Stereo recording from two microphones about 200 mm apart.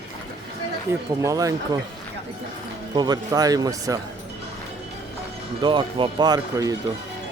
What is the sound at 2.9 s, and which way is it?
Speech, 20° right (ahead or behind).